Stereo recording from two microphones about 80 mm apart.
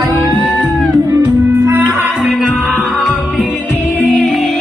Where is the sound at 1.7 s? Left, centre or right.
Right.